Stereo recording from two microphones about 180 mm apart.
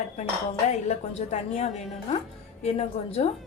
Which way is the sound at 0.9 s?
40° left (ahead or behind).